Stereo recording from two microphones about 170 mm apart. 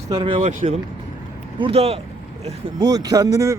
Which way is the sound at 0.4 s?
45° right (ahead or behind).